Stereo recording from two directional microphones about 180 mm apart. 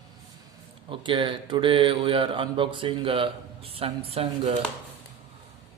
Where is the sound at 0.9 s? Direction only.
25° right (ahead or behind).